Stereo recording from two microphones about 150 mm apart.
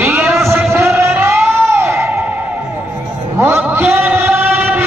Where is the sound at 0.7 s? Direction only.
15° right (ahead or behind).